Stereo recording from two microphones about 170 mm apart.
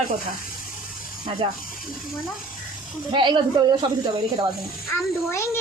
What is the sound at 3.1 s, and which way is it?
Speech, 30° right (ahead or behind).